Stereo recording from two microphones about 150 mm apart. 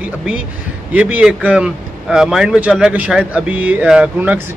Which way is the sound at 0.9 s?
10° right (ahead or behind).